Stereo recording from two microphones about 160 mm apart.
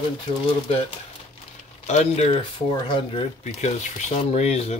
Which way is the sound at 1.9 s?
45° left (ahead or behind).